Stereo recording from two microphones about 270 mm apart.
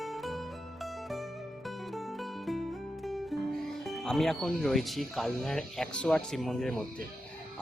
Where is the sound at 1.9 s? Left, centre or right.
Centre.